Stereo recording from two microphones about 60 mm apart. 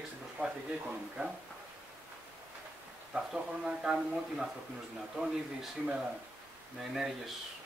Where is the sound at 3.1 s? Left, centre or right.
Centre.